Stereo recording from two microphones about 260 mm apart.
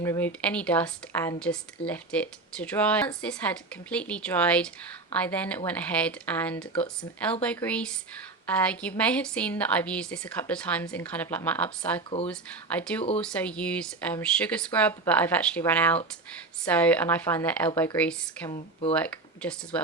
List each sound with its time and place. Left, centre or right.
0.0 s a woman's voice: centre
18.5 s speech: left
18.9 s speech: centre